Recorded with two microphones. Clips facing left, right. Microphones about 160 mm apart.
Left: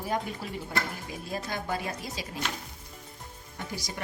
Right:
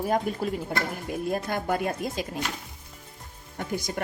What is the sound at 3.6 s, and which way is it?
Speech, 55° right (ahead or behind).